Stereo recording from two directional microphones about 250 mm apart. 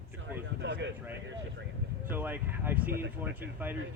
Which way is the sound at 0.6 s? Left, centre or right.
Right.